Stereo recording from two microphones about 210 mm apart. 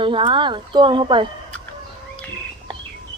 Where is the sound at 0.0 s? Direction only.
25° right (ahead or behind).